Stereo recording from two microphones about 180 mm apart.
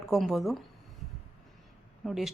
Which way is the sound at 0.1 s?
Centre (ahead or behind).